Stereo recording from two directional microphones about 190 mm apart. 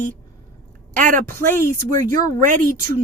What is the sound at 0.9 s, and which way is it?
Speech, 45° right (ahead or behind).